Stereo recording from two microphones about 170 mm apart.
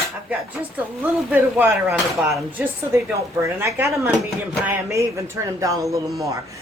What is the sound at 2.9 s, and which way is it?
Speech, 15° right (ahead or behind).